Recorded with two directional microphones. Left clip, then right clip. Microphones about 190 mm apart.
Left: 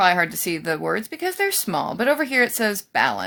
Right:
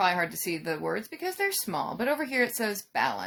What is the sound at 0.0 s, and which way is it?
Speech, 40° left (ahead or behind).